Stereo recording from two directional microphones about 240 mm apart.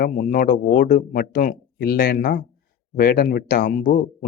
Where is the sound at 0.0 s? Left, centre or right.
Left.